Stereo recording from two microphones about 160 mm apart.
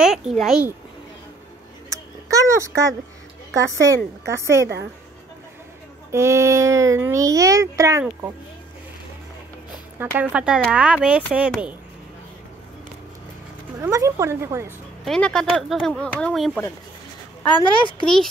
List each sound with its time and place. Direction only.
0.0 s a child's voice: centre (ahead or behind)
1.9 s a sound: 20° right (ahead or behind)
3.5 s a child's voice: 20° right (ahead or behind)
6.1 s a child's voice: 15° right (ahead or behind)
9.9 s speech: 10° right (ahead or behind)
13.7 s speech: 20° right (ahead or behind)
15.0 s speech: 5° left (ahead or behind)
17.6 s speech: 30° left (ahead or behind)
18.0 s speech: 5° left (ahead or behind)